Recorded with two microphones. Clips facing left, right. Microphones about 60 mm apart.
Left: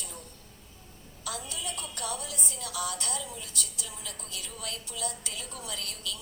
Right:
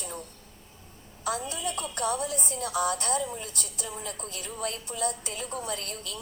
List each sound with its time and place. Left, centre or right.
1.2 s a woman's voice: right